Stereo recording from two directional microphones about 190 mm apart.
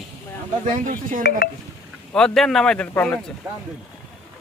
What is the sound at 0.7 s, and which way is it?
Speech, 40° right (ahead or behind).